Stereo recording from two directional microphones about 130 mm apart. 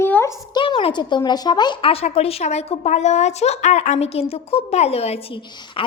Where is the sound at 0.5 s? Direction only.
40° left (ahead or behind).